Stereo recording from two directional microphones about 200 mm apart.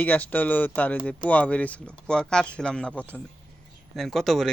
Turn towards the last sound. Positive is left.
turn(degrees=0)  # may be behind; listen again after turning